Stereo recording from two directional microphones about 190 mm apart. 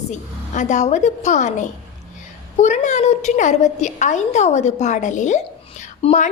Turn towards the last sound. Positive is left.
turn(degrees=35)  # may be behind; listen again after turning